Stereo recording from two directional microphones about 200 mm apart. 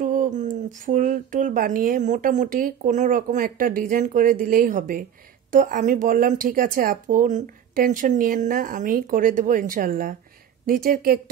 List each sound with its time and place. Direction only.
0.0 s speech: 40° right (ahead or behind)